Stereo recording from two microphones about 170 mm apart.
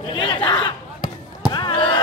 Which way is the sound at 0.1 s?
30° left (ahead or behind).